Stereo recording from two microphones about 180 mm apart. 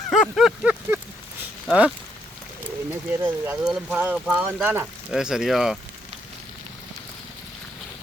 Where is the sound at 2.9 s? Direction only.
10° right (ahead or behind).